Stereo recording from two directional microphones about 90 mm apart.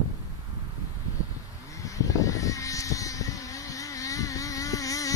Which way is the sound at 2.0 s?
40° left (ahead or behind).